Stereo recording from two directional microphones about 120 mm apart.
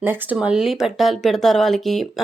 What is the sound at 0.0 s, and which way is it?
Speech, 20° right (ahead or behind).